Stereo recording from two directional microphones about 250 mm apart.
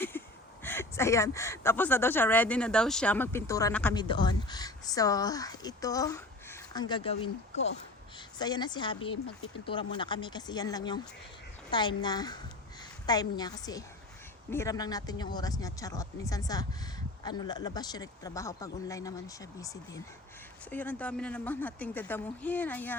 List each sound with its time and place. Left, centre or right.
0.1 s a sound: centre
0.6 s speech: centre
3.9 s speech: centre